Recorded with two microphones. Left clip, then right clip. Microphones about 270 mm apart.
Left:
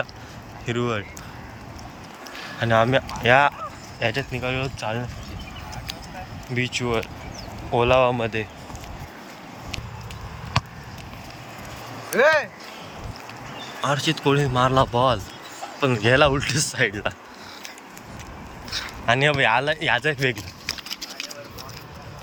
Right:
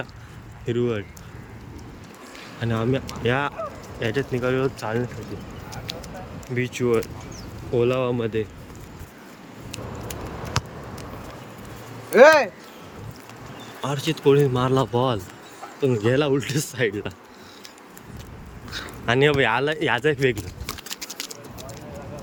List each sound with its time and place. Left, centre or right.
0.6 s speech: centre
2.6 s speech: centre
6.5 s speech: centre
12.1 s speech: right
13.8 s speech: centre
18.7 s speech: centre